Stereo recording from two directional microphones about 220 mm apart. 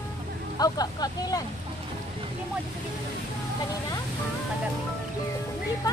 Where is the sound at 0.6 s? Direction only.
15° left (ahead or behind).